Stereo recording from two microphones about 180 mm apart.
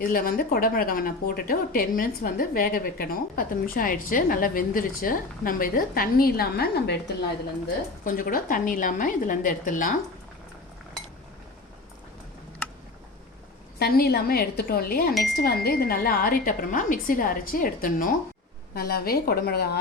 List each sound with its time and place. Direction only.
0.0 s a woman's voice: 55° left (ahead or behind)
8.0 s a woman's voice: 50° left (ahead or behind)
13.7 s a woman's voice: 60° left (ahead or behind)